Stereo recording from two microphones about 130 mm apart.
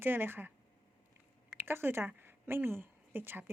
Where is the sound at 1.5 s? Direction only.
15° right (ahead or behind).